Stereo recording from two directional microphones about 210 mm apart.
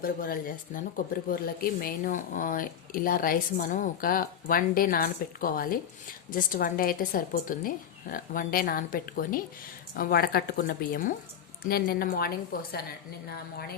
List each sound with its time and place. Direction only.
0.0 s a woman's voice: 45° left (ahead or behind)